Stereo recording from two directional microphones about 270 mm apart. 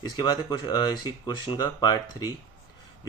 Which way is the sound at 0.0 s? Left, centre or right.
Centre.